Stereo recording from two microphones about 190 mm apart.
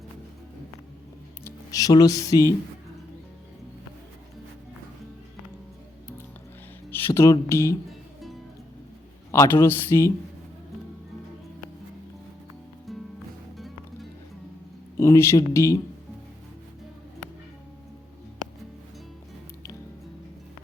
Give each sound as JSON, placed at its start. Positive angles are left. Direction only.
{"t": 1.5, "sound": "speech", "side_deg": 20}
{"t": 6.9, "sound": "speech", "side_deg": 15}
{"t": 7.9, "sound": "music", "side_deg": 0}
{"t": 9.3, "sound": "speech", "side_deg": 15}
{"t": 12.9, "sound": "music", "side_deg": 0}
{"t": 14.9, "sound": "speech", "side_deg": 15}